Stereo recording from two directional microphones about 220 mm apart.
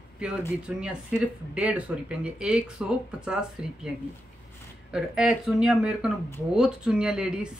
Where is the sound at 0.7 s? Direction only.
5° right (ahead or behind).